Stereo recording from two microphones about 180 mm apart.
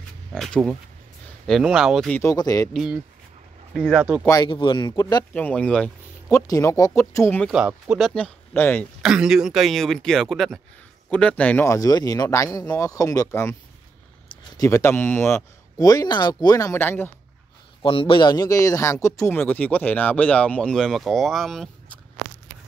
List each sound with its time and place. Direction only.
0.3 s speech: 5° left (ahead or behind)
2.2 s speech: 20° left (ahead or behind)
2.7 s speech: 5° right (ahead or behind)
4.0 s speech: 10° right (ahead or behind)
4.3 s speech: 25° left (ahead or behind)
5.3 s a man's voice: 5° left (ahead or behind)
6.2 s a man's voice: 15° left (ahead or behind)
7.5 s speech: 5° right (ahead or behind)
9.0 s a man's voice: 5° right (ahead or behind); by 13.6 s 15° left (ahead or behind)
14.6 s a man's voice: 15° left (ahead or behind)
17.8 s a man's voice: 30° left (ahead or behind); by 21.6 s centre (ahead or behind)